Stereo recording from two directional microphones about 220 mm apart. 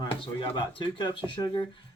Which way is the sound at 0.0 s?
20° left (ahead or behind).